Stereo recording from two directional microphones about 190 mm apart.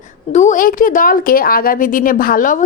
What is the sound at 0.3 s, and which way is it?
Speech, 40° left (ahead or behind).